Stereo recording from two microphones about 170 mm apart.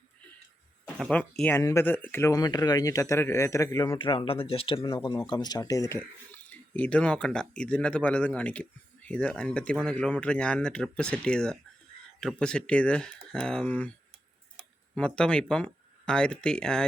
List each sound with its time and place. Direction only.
0.9 s speech: 5° left (ahead or behind)
3.9 s speech: 30° left (ahead or behind)
5.9 s speech: 10° left (ahead or behind)
14.9 s speech: 5° left (ahead or behind)